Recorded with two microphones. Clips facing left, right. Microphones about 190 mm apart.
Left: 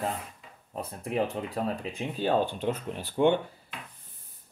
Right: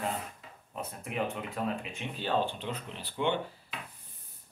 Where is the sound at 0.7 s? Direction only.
35° left (ahead or behind).